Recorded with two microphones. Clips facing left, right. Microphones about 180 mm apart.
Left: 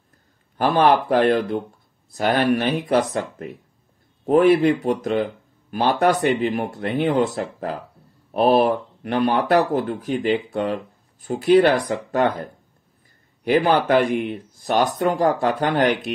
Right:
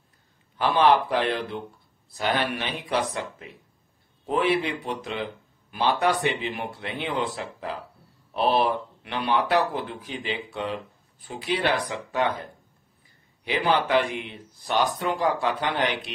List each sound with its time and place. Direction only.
0.6 s speech: 45° left (ahead or behind)